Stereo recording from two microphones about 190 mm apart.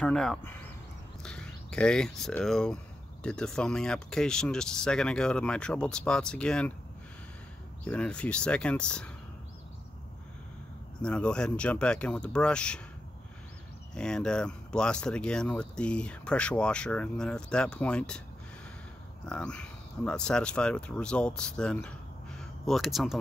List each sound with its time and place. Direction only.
0.0 s speech: 5° left (ahead or behind)
7.8 s speech: 5° left (ahead or behind)
11.0 s speech: 5° left (ahead or behind)
13.9 s speech: 5° left (ahead or behind)
19.2 s speech: 5° left (ahead or behind)